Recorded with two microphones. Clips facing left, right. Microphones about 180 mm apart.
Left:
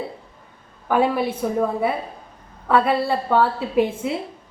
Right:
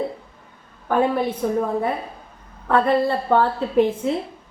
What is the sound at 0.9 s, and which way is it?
Speech, 10° left (ahead or behind).